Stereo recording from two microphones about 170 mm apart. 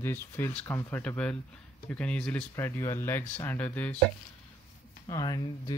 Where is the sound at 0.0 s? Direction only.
15° left (ahead or behind).